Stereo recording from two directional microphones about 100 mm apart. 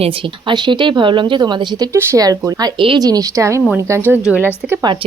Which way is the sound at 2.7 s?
55° right (ahead or behind).